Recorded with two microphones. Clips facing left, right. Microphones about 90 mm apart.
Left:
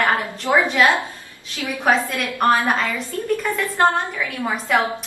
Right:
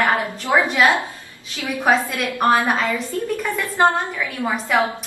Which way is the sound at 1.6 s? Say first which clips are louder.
Right 1 dB; 20° right (ahead or behind).